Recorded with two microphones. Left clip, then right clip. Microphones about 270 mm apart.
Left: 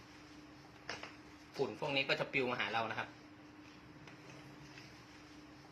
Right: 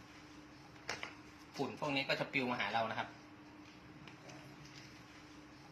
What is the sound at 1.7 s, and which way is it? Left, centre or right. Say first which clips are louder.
Speech: left 1 dB; centre.